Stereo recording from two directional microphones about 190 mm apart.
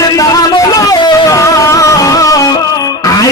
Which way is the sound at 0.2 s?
20° left (ahead or behind).